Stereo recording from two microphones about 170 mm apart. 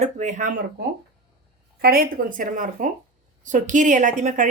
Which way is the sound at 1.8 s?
60° right (ahead or behind).